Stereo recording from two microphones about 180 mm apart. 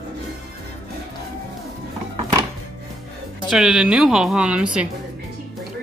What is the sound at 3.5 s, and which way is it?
Speech, centre (ahead or behind).